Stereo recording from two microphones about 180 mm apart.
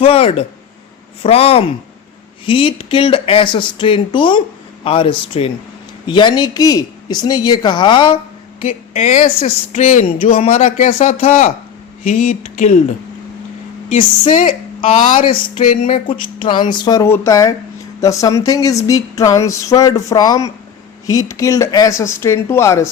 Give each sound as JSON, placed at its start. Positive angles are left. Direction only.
{"t": 0.0, "sound": "speech", "side_deg": 35}
{"t": 8.6, "sound": "speech", "side_deg": 40}
{"t": 13.9, "sound": "speech", "side_deg": 45}
{"t": 14.8, "sound": "speech", "side_deg": 30}